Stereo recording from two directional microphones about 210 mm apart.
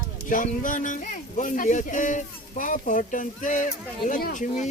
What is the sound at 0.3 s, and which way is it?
Speech, 40° left (ahead or behind).